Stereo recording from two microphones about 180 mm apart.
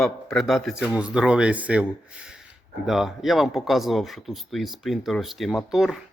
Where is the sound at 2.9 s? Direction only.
Centre (ahead or behind).